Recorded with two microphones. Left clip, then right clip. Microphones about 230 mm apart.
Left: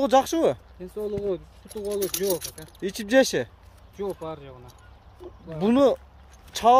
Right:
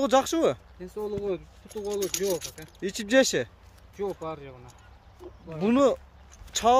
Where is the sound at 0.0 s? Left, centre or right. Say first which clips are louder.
Left 2 dB; centre.